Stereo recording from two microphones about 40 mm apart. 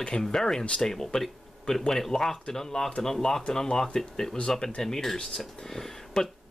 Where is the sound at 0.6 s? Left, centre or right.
Left.